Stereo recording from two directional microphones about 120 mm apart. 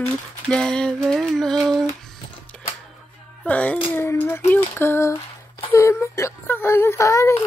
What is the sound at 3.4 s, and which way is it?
Speech, 10° left (ahead or behind).